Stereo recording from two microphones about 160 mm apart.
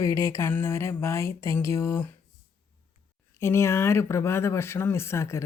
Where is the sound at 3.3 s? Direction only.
15° left (ahead or behind).